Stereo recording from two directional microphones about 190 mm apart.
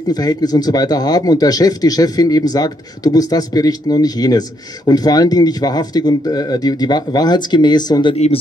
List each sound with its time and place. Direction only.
0.1 s speech: 20° left (ahead or behind)